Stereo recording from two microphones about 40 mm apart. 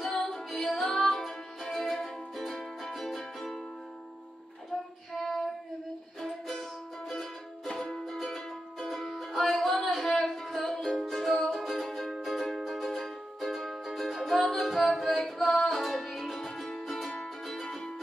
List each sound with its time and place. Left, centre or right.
0.0 s music: centre
5.1 s child singing: centre
6.2 s music: centre
7.6 s music: centre